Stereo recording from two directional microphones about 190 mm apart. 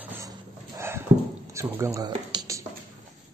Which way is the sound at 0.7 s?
15° right (ahead or behind).